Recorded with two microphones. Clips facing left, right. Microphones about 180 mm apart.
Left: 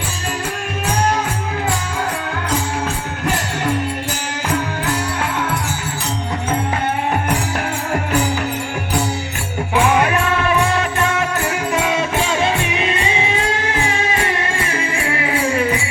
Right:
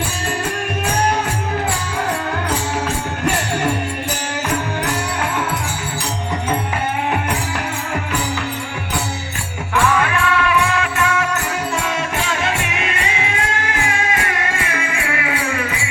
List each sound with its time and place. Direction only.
10.0 s music: 40° left (ahead or behind)
12.4 s music: 30° left (ahead or behind)